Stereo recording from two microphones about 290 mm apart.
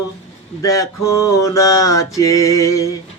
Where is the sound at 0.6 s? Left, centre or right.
Centre.